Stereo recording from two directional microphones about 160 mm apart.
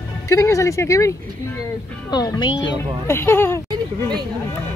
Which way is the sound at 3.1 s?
15° left (ahead or behind).